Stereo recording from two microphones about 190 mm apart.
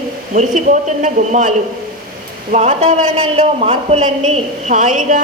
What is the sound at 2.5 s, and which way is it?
A man's voice, 35° right (ahead or behind).